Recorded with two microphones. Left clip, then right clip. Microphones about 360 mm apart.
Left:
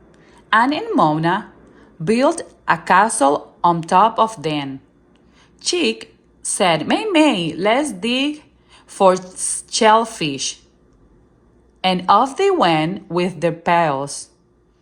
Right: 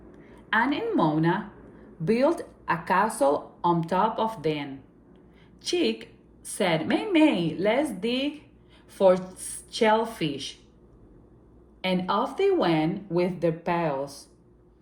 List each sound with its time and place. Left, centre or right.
0.1 s a woman's voice: centre
11.8 s a woman's voice: centre